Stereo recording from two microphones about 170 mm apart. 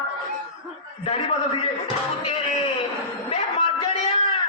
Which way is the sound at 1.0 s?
35° left (ahead or behind).